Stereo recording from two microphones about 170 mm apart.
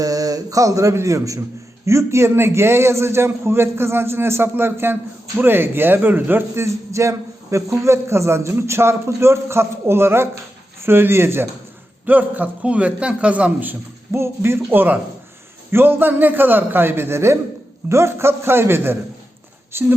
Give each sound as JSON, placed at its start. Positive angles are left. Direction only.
{"t": 0.0, "sound": "a man's voice", "side_deg": -20}